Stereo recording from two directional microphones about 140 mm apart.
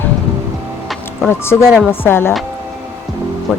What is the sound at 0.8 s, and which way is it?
Music, centre (ahead or behind).